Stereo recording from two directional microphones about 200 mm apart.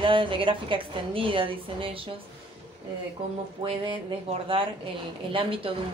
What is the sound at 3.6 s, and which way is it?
Speech, 25° right (ahead or behind).